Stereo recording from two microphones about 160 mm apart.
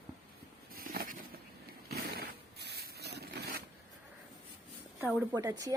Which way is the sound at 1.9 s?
75° right (ahead or behind).